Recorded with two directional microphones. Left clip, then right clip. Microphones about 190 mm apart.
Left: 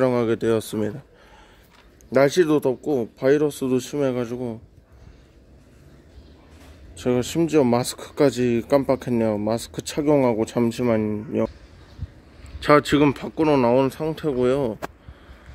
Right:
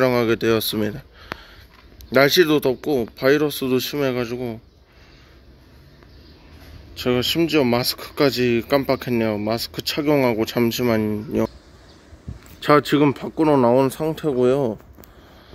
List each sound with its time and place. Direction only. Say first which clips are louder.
0.0 s speech: right 2 dB; 5° left (ahead or behind)
2.0 s speech: right 2 dB; 5° left (ahead or behind)
7.0 s speech: right 2 dB; 15° left (ahead or behind)
12.5 s speech: right 1 dB; centre (ahead or behind)